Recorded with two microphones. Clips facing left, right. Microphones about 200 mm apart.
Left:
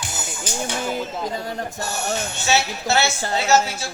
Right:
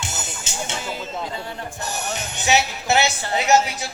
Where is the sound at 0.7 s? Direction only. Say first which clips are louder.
Left 6 dB; 50° left (ahead or behind).